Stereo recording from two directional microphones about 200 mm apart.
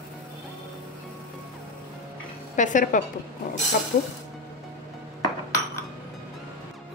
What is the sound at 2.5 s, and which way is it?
Speech, 40° left (ahead or behind).